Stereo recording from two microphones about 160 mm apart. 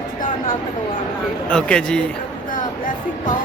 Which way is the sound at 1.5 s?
5° left (ahead or behind).